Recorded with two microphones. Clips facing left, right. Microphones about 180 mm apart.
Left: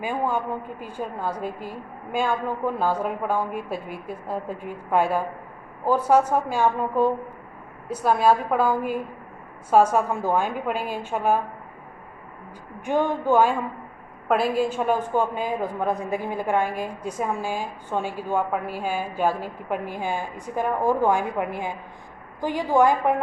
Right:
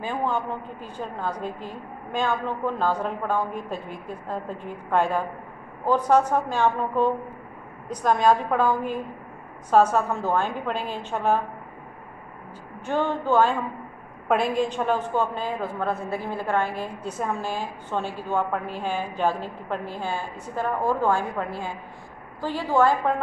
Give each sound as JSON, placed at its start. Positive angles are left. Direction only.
{"t": 0.0, "sound": "a woman's voice", "side_deg": 10}
{"t": 12.8, "sound": "a woman's voice", "side_deg": 15}